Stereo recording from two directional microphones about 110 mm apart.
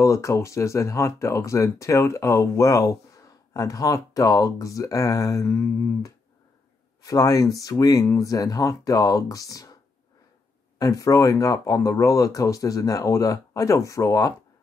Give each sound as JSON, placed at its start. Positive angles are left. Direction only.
{"t": 0.0, "sound": "speech", "side_deg": 25}
{"t": 10.8, "sound": "speech", "side_deg": 30}